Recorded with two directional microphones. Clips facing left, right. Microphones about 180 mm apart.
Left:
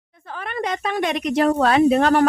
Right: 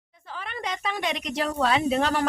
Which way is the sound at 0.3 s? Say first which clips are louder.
Left 7 dB; 55° left (ahead or behind).